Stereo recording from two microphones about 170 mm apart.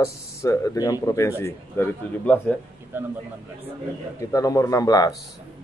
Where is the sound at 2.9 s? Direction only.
10° right (ahead or behind).